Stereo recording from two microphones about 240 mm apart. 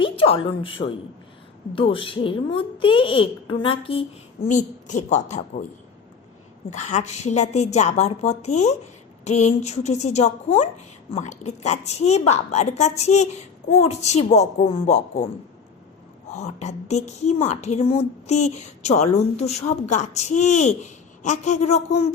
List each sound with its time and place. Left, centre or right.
0.0 s a woman's voice: left
6.7 s a woman's voice: left
16.3 s a woman's voice: left